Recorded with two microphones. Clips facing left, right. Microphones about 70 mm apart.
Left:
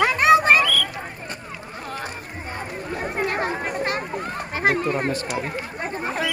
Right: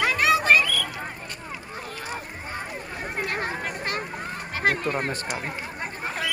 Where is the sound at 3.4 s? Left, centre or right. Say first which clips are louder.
Left 5 dB; left.